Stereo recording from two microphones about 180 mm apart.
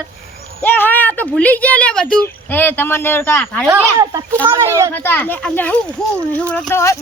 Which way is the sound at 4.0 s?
20° right (ahead or behind).